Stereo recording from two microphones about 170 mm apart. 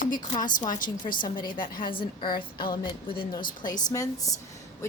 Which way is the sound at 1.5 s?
55° left (ahead or behind).